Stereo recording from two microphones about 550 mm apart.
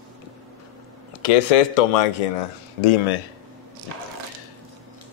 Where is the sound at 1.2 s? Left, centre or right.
Left.